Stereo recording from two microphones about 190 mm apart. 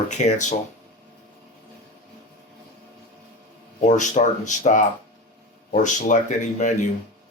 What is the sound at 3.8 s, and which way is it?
Speech, 40° left (ahead or behind).